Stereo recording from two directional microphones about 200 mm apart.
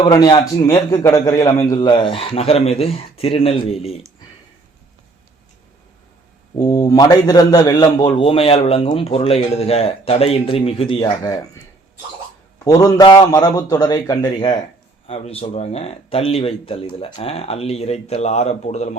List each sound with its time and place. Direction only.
0.0 s a man's voice: 20° left (ahead or behind)
6.6 s a man's voice: 20° left (ahead or behind)
12.6 s a man's voice: 20° left (ahead or behind)
15.0 s speech: 30° left (ahead or behind)